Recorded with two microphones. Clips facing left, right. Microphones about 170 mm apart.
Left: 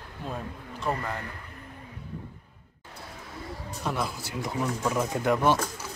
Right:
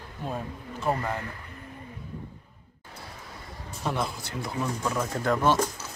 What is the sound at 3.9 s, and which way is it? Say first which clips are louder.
Speech: right 1 dB; 5° left (ahead or behind).